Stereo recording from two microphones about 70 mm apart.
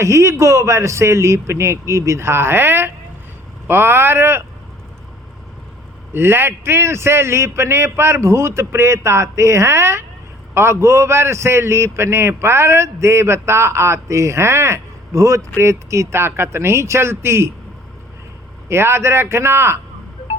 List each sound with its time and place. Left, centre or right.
0.0 s a man's voice: right
6.1 s a man's voice: right
18.7 s a man's voice: right